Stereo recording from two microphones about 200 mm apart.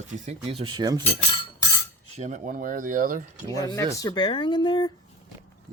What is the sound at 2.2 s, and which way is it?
Speech, 40° right (ahead or behind).